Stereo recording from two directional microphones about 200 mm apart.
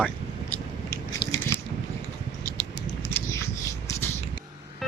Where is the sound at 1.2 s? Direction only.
25° left (ahead or behind).